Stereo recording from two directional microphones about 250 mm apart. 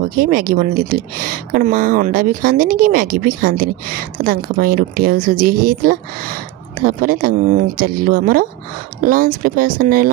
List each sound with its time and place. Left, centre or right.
0.2 s speech: right